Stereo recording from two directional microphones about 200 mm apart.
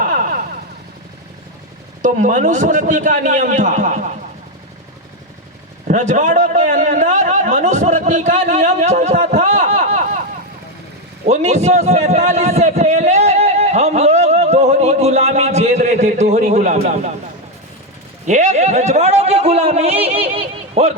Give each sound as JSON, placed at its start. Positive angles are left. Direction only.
{"t": 0.0, "sound": "vehicle", "side_deg": -40}
{"t": 2.0, "sound": "a man's voice", "side_deg": -40}
{"t": 5.9, "sound": "a man's voice", "side_deg": -40}
{"t": 11.3, "sound": "a sound", "side_deg": -35}
{"t": 18.3, "sound": "a man's voice", "side_deg": -35}